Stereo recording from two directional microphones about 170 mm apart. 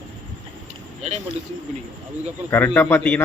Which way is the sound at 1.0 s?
40° right (ahead or behind).